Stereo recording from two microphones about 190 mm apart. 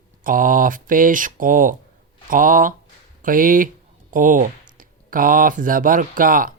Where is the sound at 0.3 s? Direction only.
45° right (ahead or behind).